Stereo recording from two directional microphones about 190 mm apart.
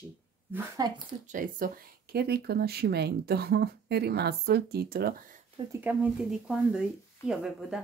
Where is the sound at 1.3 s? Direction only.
45° right (ahead or behind).